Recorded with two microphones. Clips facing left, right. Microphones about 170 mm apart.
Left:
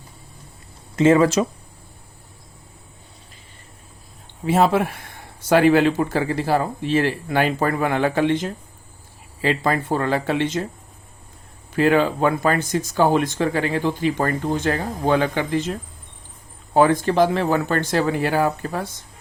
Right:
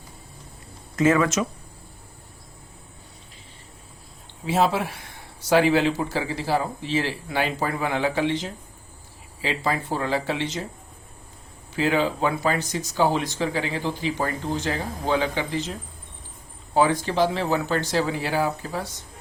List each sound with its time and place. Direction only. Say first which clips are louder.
0.9 s speech: left 5 dB; 30° left (ahead or behind)
4.4 s speech: left 4 dB; 55° left (ahead or behind)
11.7 s speech: left 5 dB; 55° left (ahead or behind)